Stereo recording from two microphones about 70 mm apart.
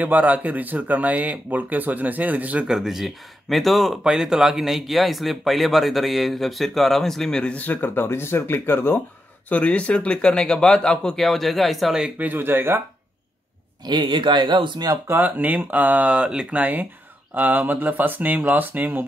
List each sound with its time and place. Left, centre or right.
0.0 s speech: right
2.6 s speech: centre
7.5 s speech: left
9.5 s speech: centre
12.2 s speech: right
13.8 s speech: right
15.0 s speech: right